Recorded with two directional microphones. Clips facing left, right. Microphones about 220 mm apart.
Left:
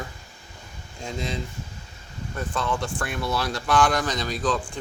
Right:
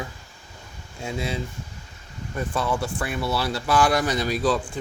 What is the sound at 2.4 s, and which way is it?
Speech, 10° right (ahead or behind).